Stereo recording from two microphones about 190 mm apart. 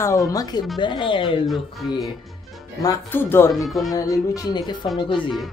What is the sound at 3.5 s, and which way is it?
Speech, centre (ahead or behind).